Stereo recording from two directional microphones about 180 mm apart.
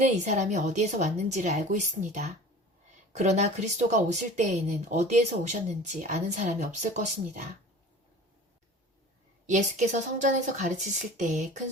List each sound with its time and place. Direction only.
0.0 s a woman's voice: 40° right (ahead or behind)
9.5 s a woman's voice: 45° right (ahead or behind)